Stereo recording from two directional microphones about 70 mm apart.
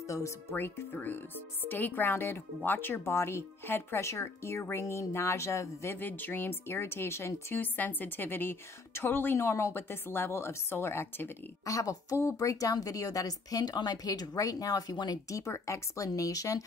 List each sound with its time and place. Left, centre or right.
0.5 s speech: left
6.0 s speech: left
7.5 s speech: left
11.6 s speech: left
15.2 s speech: left